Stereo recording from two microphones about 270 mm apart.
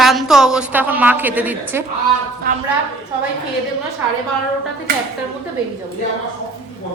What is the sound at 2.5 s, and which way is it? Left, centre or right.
Speech, right.